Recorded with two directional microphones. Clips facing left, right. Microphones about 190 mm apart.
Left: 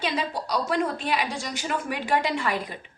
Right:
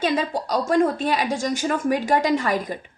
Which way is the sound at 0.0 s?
45° right (ahead or behind).